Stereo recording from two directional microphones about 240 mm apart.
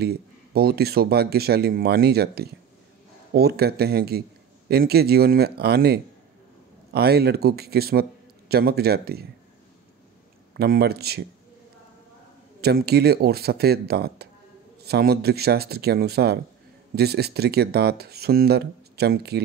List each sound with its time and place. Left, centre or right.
0.0 s speech: right
10.5 s speech: right
12.5 s speech: right